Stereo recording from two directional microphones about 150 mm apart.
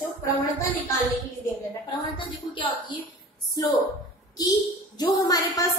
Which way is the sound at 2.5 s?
35° left (ahead or behind).